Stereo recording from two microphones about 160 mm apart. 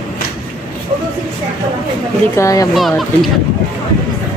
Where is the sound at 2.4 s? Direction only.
20° left (ahead or behind).